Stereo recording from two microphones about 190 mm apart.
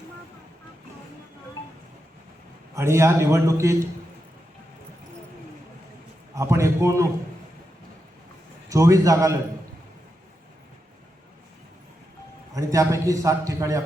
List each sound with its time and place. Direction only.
2.7 s a man's voice: 15° right (ahead or behind)
6.3 s a man's voice: 15° right (ahead or behind)
8.7 s a man's voice: 15° right (ahead or behind)
12.5 s a man's voice: 15° right (ahead or behind)